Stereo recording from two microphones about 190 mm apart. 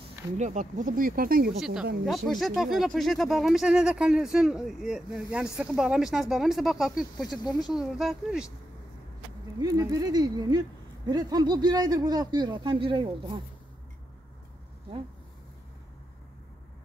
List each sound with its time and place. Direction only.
0.4 s speech: 40° right (ahead or behind)
1.6 s speech: 5° right (ahead or behind)
7.4 s speech: 20° left (ahead or behind)
7.7 s speech: centre (ahead or behind)
9.6 s speech: 20° right (ahead or behind)